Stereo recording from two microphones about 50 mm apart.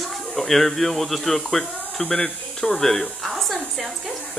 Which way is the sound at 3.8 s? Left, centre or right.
Right.